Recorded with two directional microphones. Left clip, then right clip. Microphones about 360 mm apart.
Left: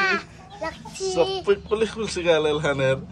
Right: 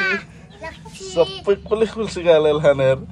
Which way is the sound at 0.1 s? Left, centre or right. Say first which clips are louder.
Right 1 dB; centre.